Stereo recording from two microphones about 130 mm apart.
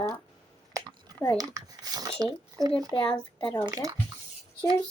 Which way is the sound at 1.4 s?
30° right (ahead or behind).